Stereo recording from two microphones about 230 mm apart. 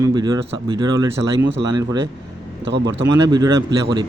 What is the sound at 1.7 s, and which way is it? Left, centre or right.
A man's voice, centre.